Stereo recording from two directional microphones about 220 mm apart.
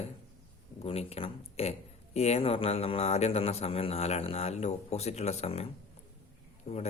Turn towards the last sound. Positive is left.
turn(degrees=30)  # may be behind; listen again after turning